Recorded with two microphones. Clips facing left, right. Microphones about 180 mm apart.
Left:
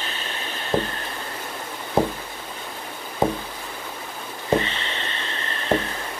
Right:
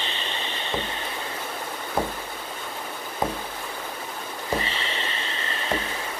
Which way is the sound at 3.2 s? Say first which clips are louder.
Left 6 dB; 30° left (ahead or behind).